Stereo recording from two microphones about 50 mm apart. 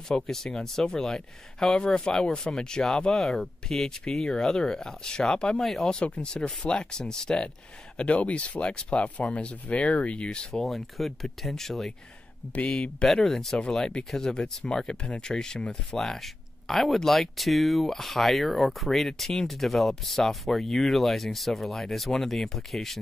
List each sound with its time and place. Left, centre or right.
0.1 s speech: centre
5.6 s speech: centre
5.9 s speech: left
8.0 s speech: left
10.6 s speech: centre
13.0 s speech: centre